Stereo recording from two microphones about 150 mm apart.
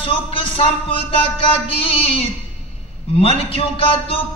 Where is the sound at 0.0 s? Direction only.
35° left (ahead or behind).